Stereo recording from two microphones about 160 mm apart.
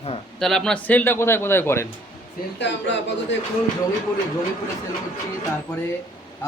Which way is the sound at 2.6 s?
90° left.